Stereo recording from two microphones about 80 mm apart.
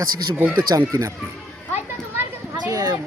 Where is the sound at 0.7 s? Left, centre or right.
Right.